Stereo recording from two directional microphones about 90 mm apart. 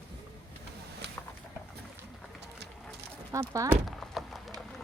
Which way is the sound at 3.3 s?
35° right (ahead or behind).